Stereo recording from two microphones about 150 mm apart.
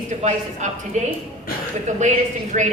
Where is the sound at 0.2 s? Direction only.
55° right (ahead or behind).